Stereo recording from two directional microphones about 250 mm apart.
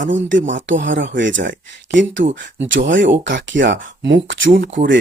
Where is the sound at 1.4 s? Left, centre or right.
Right.